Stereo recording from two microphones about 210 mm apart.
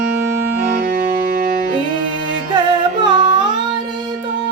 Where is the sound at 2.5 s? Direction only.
20° right (ahead or behind).